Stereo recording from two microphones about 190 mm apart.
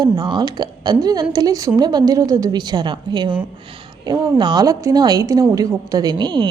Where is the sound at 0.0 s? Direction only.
20° right (ahead or behind).